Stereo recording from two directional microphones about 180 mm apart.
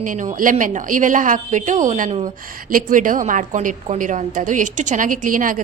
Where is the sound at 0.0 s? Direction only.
45° right (ahead or behind).